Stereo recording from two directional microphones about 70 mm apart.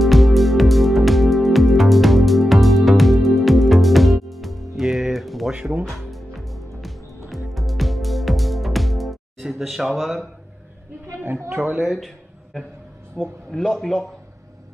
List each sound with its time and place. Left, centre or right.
0.0 s music: centre
5.5 s music: centre
5.9 s music: centre
11.1 s a woman's voice: right
11.5 s speech: centre
11.8 s a man's voice: centre
13.2 s speech: centre
13.5 s a man's voice: centre